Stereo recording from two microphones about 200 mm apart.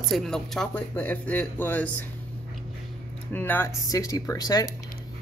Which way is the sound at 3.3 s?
10° left (ahead or behind).